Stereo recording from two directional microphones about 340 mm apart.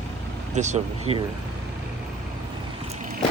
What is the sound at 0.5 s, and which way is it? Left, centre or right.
Speech, centre.